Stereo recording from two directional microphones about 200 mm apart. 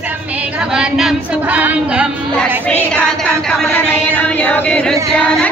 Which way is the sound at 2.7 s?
5° left (ahead or behind).